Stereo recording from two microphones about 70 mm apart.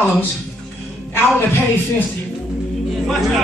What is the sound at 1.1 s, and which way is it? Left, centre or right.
Speech, left.